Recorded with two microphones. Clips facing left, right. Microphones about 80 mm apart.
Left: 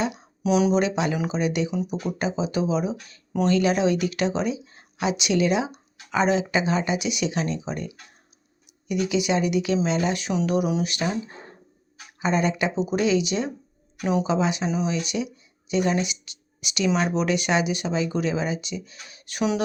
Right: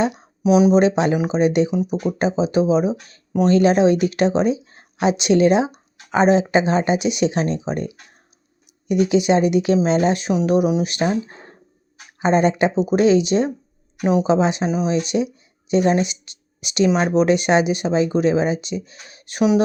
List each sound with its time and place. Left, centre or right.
0.4 s speech: centre
1.7 s speech: centre
4.6 s speech: right
12.2 s speech: right